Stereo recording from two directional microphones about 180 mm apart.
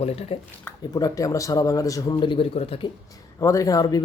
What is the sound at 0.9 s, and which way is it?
Speech, 20° left (ahead or behind).